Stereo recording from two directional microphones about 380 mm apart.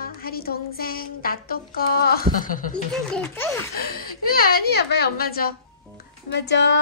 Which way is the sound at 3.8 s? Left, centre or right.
Left.